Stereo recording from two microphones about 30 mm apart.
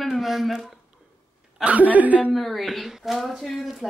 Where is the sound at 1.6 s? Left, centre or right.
Right.